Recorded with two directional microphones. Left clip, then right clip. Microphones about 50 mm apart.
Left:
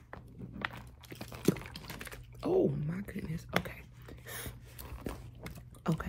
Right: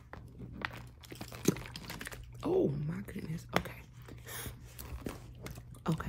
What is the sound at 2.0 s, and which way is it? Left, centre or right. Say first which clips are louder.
Typing: left 2 dB; right.